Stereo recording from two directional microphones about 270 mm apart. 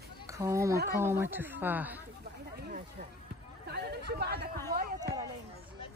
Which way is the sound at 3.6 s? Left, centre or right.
Right.